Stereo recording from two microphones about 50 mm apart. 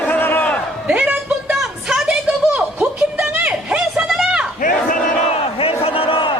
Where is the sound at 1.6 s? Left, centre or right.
Centre.